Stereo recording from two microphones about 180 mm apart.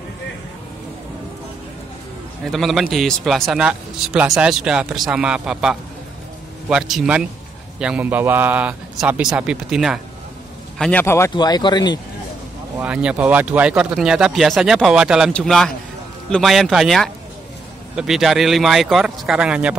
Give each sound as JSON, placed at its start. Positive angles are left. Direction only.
{"t": 2.4, "sound": "a man's voice", "side_deg": 0}
{"t": 10.8, "sound": "speech", "side_deg": 10}
{"t": 12.7, "sound": "speech", "side_deg": -5}